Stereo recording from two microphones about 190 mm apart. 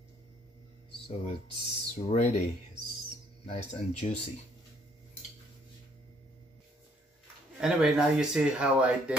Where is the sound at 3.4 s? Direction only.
35° left (ahead or behind).